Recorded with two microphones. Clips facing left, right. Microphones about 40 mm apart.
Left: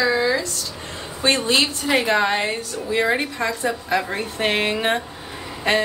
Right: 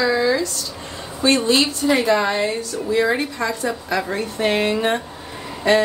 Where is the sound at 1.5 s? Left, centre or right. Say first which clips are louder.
Right 2 dB; left.